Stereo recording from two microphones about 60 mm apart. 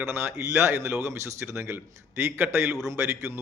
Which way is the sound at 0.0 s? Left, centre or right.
Right.